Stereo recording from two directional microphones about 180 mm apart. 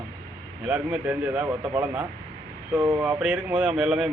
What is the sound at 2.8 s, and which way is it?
Speech, 20° right (ahead or behind).